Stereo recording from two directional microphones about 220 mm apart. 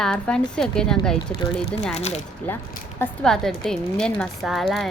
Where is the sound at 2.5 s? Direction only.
10° left (ahead or behind).